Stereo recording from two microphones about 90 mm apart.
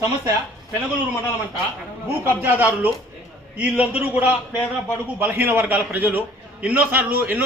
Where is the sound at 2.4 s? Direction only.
20° right (ahead or behind).